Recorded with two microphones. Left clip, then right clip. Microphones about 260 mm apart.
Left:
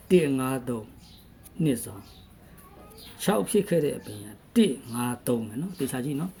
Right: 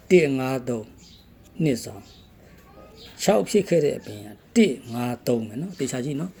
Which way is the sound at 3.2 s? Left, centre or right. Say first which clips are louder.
Right 5 dB; centre.